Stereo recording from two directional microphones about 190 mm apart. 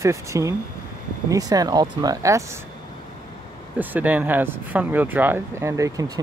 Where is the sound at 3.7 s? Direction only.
10° right (ahead or behind).